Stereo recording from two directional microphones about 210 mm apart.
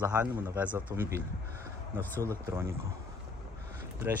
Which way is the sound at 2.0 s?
10° left (ahead or behind).